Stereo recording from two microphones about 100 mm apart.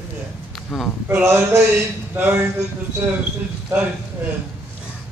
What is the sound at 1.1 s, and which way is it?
Speech, 25° right (ahead or behind).